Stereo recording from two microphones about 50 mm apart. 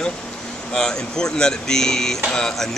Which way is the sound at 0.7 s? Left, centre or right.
Centre.